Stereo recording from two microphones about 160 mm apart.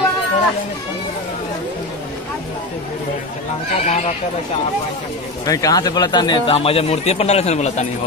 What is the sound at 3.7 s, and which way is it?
Speech, 45° left (ahead or behind).